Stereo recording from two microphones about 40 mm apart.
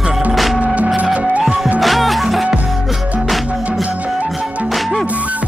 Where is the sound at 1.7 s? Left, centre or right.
Centre.